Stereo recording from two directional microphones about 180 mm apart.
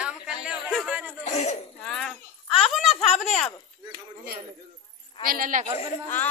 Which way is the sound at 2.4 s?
30° left (ahead or behind).